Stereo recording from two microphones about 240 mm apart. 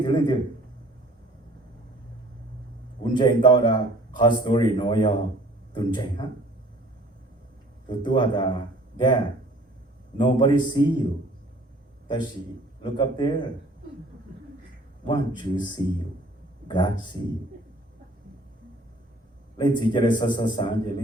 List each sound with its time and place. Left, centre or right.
0.0 s speech: centre
3.0 s speech: centre
7.9 s speech: centre
12.8 s speech: centre
15.0 s speech: centre
16.6 s speech: centre
19.5 s speech: centre